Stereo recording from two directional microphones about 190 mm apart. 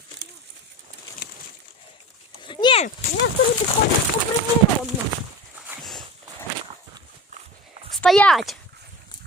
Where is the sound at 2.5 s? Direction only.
25° left (ahead or behind).